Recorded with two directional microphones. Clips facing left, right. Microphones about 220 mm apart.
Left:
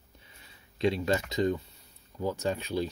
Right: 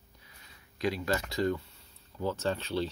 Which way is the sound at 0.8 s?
25° left (ahead or behind).